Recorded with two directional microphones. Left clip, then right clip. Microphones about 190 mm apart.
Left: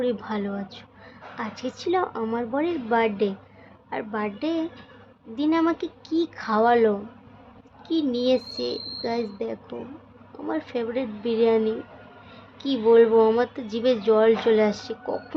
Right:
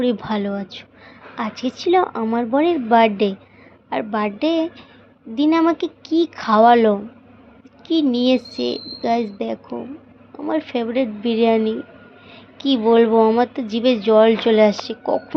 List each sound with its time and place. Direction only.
0.0 s a woman's voice: 20° right (ahead or behind)